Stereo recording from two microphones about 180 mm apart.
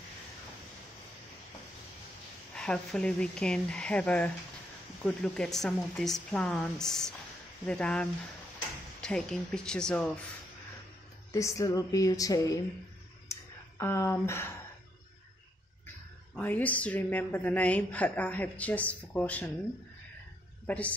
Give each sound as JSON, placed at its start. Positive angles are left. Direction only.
{"t": 2.5, "sound": "a woman's voice", "side_deg": 5}
{"t": 11.3, "sound": "a sound", "side_deg": 15}
{"t": 16.3, "sound": "a woman's voice", "side_deg": 10}
{"t": 20.6, "sound": "a woman's voice", "side_deg": 10}